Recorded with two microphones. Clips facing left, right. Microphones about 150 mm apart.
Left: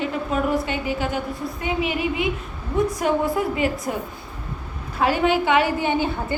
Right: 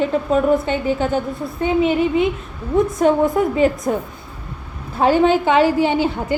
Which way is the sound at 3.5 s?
30° right (ahead or behind).